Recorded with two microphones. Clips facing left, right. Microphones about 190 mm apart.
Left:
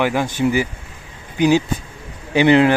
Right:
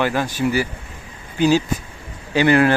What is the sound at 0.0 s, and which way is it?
Speech, 15° left (ahead or behind).